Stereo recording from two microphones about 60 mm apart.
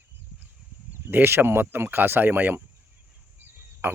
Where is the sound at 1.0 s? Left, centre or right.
Right.